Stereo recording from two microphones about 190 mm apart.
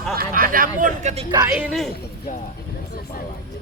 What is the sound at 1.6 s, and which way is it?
Speech, centre (ahead or behind).